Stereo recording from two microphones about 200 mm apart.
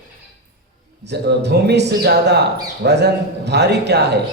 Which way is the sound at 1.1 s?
55° right (ahead or behind).